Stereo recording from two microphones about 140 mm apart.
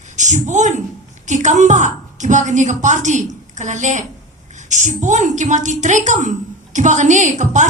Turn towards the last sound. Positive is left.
turn(degrees=-60)  # may be behind; listen again after turning